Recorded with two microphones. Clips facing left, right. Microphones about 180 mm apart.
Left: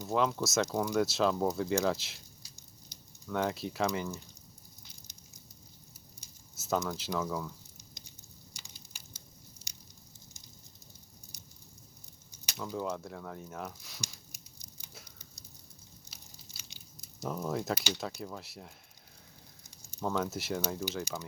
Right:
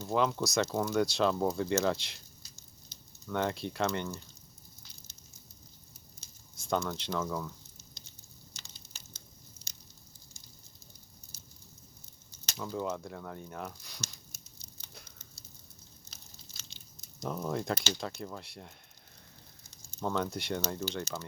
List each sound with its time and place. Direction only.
0.1 s speech: centre (ahead or behind)
2.9 s sizzle: 15° left (ahead or behind)
3.2 s speech: centre (ahead or behind)
6.1 s a sound: 5° left (ahead or behind)
7.8 s sizzle: 15° left (ahead or behind)
8.5 s a sound: 10° left (ahead or behind)
9.6 s squish: 15° left (ahead or behind)
11.3 s a sound: 15° left (ahead or behind)
12.5 s speech: centre (ahead or behind)
14.0 s a sound: 15° left (ahead or behind)
20.0 s speech: 5° left (ahead or behind)
20.8 s speech: 10° left (ahead or behind)